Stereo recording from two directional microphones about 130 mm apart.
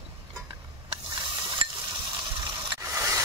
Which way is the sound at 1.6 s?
40° right (ahead or behind).